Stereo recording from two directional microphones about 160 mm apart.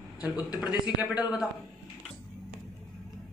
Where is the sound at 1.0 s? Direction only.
5° right (ahead or behind).